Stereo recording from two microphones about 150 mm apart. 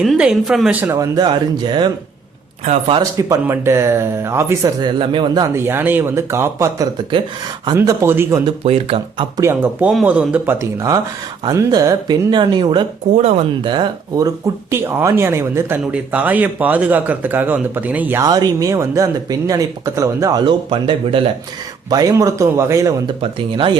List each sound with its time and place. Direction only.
0.0 s speech: 5° right (ahead or behind)
0.8 s speech: 20° right (ahead or behind); by 3.0 s 40° right (ahead or behind)
3.0 s speech: 20° right (ahead or behind)
5.5 s speech: 15° right (ahead or behind)
8.4 s speech: 40° right (ahead or behind)
9.4 s speech: 15° right (ahead or behind)
18.2 s speech: 25° right (ahead or behind)
23.2 s speech: 35° right (ahead or behind)